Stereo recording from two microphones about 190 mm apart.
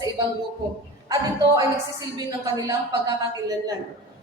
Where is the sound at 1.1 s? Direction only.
20° right (ahead or behind).